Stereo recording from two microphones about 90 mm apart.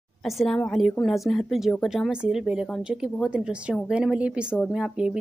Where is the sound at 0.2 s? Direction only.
Centre (ahead or behind).